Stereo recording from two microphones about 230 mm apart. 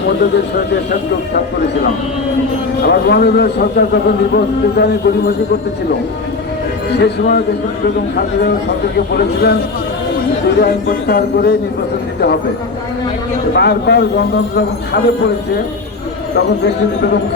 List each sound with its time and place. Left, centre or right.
2.8 s a man's voice: left
6.9 s a man's voice: left
10.6 s a man's voice: left
13.5 s a man's voice: left
16.3 s a man's voice: left